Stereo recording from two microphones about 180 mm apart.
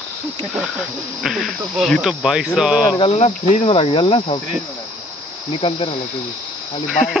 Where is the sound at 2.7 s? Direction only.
25° left (ahead or behind).